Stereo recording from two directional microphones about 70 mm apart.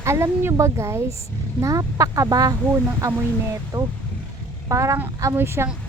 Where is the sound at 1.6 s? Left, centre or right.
Right.